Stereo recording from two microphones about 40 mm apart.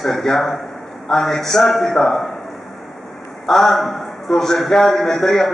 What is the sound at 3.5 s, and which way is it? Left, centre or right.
A man's voice, centre.